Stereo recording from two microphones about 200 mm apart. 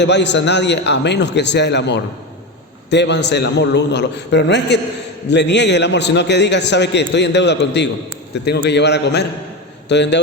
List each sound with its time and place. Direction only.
0.0 s a man's voice: 60° left (ahead or behind)